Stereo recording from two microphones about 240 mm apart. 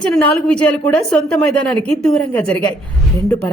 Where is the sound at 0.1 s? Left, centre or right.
Centre.